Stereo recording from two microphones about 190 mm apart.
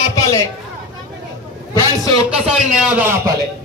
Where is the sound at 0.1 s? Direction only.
15° left (ahead or behind).